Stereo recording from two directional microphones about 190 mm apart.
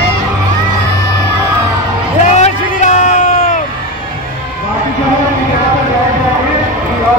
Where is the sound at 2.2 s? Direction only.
40° left (ahead or behind).